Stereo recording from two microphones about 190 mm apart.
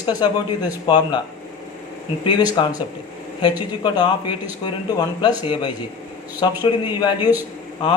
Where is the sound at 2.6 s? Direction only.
25° left (ahead or behind).